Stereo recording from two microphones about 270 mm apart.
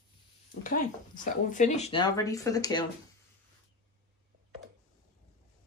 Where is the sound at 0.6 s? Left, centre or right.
Left; by 2.9 s centre.